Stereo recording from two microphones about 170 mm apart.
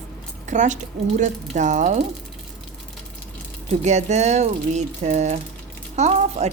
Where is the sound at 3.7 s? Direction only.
45° right (ahead or behind).